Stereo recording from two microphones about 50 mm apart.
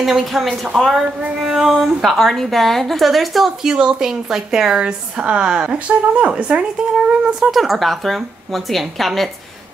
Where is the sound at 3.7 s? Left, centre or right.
Centre.